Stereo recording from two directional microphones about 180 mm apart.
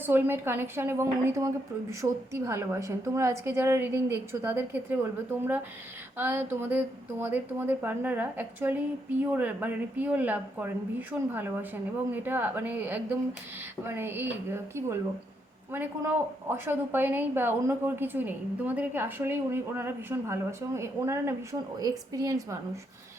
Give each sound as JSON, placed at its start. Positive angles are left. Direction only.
{"t": 0.0, "sound": "a woman's voice", "side_deg": -10}